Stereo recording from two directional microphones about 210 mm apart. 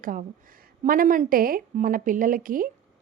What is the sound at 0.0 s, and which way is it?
A woman's voice, 40° right (ahead or behind).